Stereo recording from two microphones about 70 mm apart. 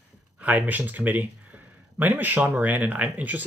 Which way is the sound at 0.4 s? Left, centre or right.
Right.